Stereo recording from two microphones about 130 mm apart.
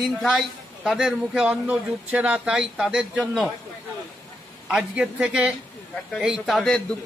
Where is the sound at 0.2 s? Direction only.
5° left (ahead or behind).